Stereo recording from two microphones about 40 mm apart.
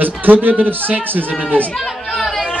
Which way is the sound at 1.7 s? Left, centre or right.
Centre.